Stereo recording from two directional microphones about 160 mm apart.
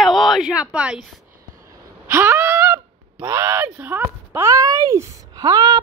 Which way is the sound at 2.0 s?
15° right (ahead or behind).